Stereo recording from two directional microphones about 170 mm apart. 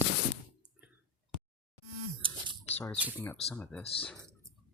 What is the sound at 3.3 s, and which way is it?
Speech, 5° left (ahead or behind).